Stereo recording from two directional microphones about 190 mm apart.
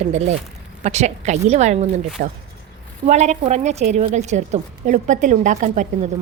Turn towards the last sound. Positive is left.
turn(degrees=-40)  # may be behind; listen again after turning